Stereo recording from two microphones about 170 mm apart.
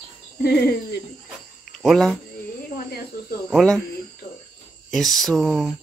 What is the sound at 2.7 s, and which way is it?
Speech, 65° left (ahead or behind).